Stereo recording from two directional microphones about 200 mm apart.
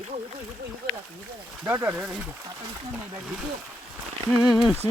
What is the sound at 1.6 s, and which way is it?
Speech, 10° right (ahead or behind).